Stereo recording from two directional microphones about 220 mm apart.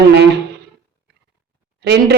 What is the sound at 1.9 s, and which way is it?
Speech, 50° right (ahead or behind).